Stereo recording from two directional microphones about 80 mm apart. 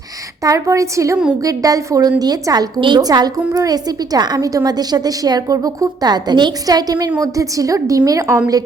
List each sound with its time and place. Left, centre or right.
0.4 s a woman's voice: right